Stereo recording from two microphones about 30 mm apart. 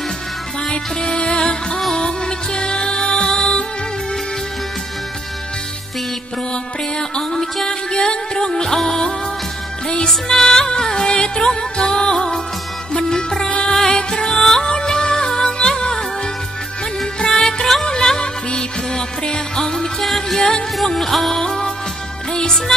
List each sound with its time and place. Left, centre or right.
0.7 s music: left
6.5 s music: centre
8.7 s music: centre
10.0 s music: centre; by 12.4 s left
13.7 s music: centre
14.7 s music: left
17.2 s music: left
19.5 s music: left
20.9 s music: centre
21.3 s music: centre
22.7 s music: centre